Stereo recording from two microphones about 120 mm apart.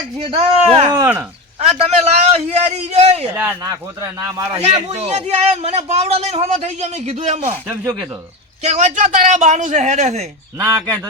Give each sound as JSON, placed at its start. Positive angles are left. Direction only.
{"t": 0.2, "sound": "speech", "side_deg": -50}
{"t": 1.0, "sound": "a man's voice", "side_deg": -15}
{"t": 2.0, "sound": "a man's voice", "side_deg": -60}
{"t": 3.3, "sound": "a man's voice", "side_deg": -15}
{"t": 3.7, "sound": "speech", "side_deg": -30}
{"t": 4.6, "sound": "a man's voice", "side_deg": -60}
{"t": 8.6, "sound": "a man's voice", "side_deg": -80}
{"t": 10.6, "sound": "speech", "side_deg": -25}